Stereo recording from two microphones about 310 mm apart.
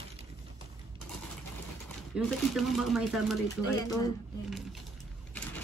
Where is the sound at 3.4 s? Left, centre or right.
Centre.